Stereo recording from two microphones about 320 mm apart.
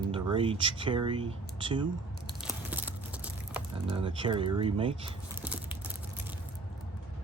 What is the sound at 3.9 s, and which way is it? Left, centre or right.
Speech, centre.